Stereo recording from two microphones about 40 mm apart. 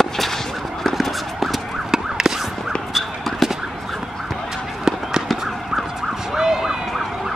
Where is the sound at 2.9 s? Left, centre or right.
Centre.